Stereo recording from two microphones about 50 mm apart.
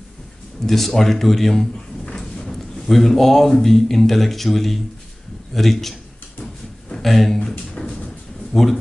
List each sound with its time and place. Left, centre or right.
0.7 s speech: centre
2.0 s drawer open or close: centre
3.5 s speech: centre
7.0 s speech: centre
7.8 s a sound: centre
8.5 s speech: centre